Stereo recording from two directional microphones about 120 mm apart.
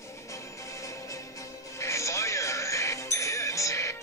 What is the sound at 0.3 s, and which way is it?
Music, 25° left (ahead or behind).